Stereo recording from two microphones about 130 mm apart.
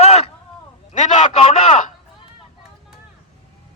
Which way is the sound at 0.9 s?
50° left (ahead or behind).